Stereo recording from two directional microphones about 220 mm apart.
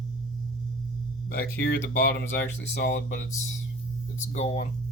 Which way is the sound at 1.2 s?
45° left (ahead or behind).